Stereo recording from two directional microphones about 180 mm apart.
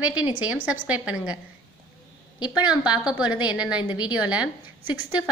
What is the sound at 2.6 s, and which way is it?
A woman's voice, 5° right (ahead or behind).